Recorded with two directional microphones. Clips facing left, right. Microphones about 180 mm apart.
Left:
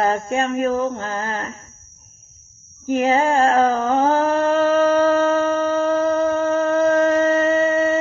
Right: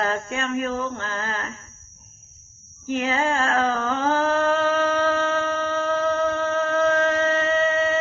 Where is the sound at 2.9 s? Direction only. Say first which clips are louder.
Left 6 dB; 40° left (ahead or behind).